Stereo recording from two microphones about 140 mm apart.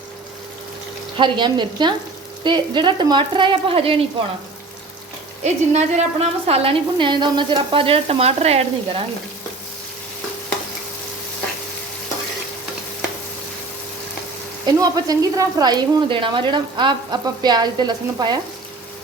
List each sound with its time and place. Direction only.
1.1 s a woman's voice: 35° right (ahead or behind)
5.4 s a woman's voice: 50° right (ahead or behind)
14.8 s a woman's voice: 25° right (ahead or behind)